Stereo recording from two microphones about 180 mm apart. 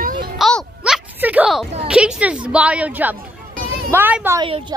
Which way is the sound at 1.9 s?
5° right (ahead or behind).